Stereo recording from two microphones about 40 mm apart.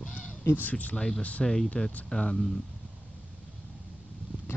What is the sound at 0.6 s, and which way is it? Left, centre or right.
Speech, left.